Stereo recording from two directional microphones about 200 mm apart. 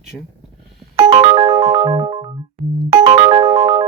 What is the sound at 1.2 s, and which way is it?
Music, 30° right (ahead or behind).